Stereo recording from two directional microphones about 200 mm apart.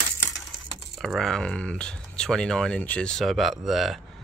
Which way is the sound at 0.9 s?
Centre (ahead or behind).